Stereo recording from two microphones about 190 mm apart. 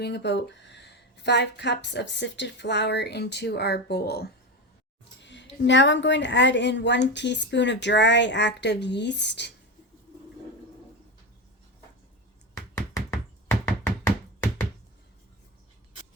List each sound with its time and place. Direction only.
0.0 s a woman's voice: 65° left (ahead or behind)
5.2 s a woman's voice: 70° left (ahead or behind)
12.5 s knock: 15° left (ahead or behind)